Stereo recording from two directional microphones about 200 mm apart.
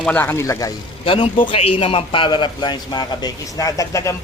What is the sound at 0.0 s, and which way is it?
Speech, 10° left (ahead or behind).